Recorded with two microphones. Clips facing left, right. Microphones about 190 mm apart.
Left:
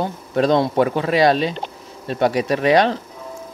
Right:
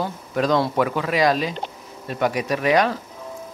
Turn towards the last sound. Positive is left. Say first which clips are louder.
# left 3 dB
turn(degrees=30)  # may be behind; listen again after turning